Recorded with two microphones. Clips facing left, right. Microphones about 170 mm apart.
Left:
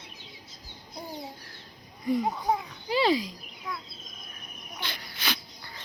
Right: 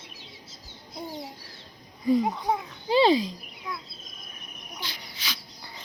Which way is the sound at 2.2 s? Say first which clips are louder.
Right 1 dB; 25° right (ahead or behind).